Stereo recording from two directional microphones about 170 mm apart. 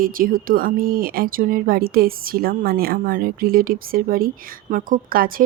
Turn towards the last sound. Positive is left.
turn(degrees=-60)  # may be behind; listen again after turning